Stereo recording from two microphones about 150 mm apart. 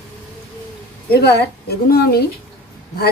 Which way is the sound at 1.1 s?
90° left.